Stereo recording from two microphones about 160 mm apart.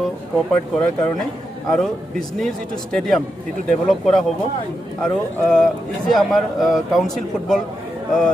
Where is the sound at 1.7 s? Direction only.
Centre (ahead or behind).